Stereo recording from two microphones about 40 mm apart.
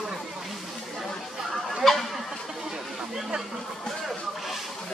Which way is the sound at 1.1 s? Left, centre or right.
Centre.